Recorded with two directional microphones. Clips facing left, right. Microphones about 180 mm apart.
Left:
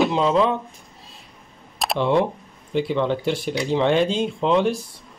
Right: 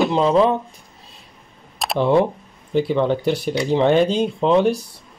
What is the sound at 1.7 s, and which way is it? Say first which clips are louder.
Camera: right 1 dB; centre (ahead or behind).